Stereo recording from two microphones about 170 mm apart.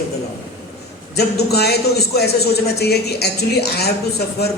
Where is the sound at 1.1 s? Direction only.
70° left (ahead or behind).